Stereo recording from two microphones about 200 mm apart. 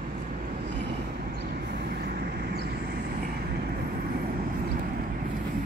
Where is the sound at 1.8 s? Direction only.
55° right (ahead or behind).